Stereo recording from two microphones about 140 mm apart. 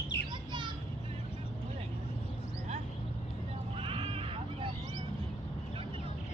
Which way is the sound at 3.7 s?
40° right (ahead or behind).